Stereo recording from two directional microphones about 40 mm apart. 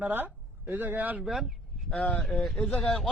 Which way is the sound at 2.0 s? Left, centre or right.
Left.